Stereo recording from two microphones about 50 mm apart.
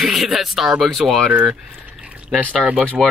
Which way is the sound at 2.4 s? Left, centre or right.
Right.